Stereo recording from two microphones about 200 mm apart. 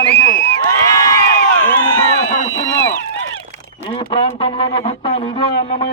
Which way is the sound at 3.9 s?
25° left (ahead or behind).